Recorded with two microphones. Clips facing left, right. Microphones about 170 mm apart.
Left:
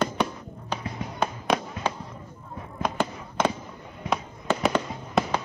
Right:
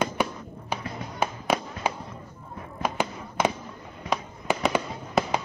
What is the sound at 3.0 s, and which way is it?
Fireworks, 15° right (ahead or behind).